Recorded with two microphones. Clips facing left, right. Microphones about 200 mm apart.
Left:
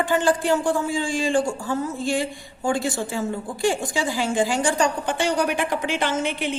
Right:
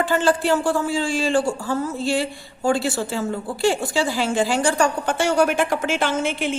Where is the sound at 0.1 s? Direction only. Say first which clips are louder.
Even; 15° left (ahead or behind).